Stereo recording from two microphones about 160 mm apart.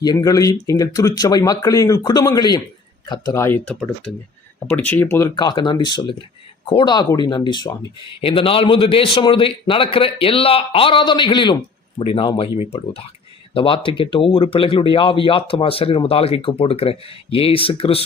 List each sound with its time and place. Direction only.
0.0 s speech: 25° left (ahead or behind)
3.7 s speech: centre (ahead or behind)
5.4 s speech: 25° left (ahead or behind)